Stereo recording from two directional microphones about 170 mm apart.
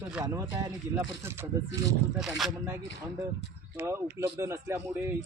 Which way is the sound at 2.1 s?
Centre (ahead or behind).